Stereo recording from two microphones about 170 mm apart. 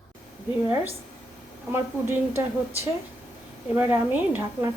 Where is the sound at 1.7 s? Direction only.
15° right (ahead or behind).